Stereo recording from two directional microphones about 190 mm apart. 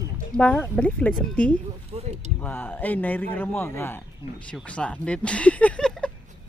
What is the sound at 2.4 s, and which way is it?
A man's voice, 10° left (ahead or behind).